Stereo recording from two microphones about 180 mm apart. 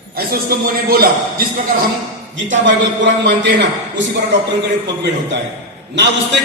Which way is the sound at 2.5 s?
90° right.